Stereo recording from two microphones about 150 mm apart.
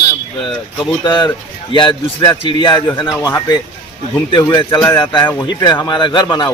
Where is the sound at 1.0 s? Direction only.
30° left (ahead or behind).